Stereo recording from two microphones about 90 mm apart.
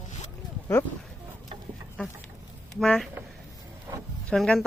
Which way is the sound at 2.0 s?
15° left (ahead or behind).